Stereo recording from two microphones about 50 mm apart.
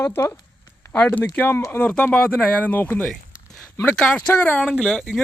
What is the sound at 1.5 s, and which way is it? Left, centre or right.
Speech, left.